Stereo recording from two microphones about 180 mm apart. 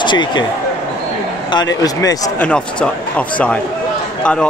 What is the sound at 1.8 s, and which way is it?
Speech, 20° left (ahead or behind).